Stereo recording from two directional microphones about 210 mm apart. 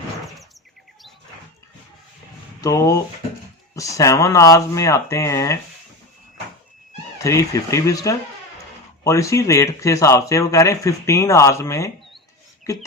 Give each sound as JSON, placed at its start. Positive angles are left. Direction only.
{"t": 2.6, "sound": "speech", "side_deg": 15}
{"t": 7.2, "sound": "speech", "side_deg": 15}